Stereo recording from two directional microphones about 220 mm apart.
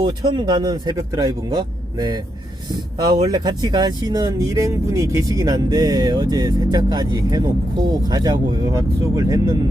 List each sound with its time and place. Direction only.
0.0 s speech: 20° right (ahead or behind)